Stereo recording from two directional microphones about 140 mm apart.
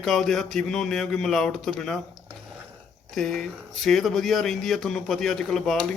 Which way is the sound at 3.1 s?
Centre (ahead or behind).